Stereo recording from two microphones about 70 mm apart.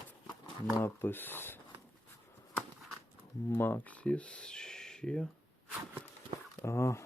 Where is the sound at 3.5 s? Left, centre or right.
Left; by 5.3 s centre.